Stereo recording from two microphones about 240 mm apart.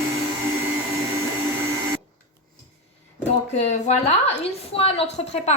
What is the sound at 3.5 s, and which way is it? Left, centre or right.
A woman's voice, left.